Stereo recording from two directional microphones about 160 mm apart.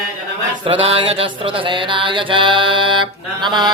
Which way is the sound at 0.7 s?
35° right (ahead or behind).